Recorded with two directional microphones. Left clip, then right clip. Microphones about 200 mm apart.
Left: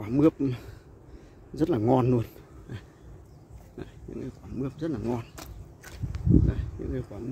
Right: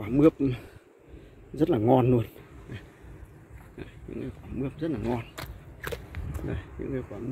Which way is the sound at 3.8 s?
10° left (ahead or behind).